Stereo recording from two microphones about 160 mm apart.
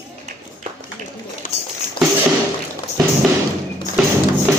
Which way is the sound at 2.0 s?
30° left (ahead or behind).